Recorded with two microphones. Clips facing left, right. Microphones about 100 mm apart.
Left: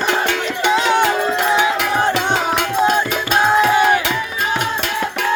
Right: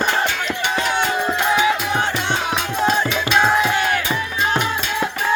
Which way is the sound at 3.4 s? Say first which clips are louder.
Left 5 dB; 10° left (ahead or behind).